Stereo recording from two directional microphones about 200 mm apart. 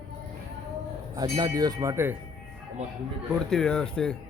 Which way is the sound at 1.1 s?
20° right (ahead or behind).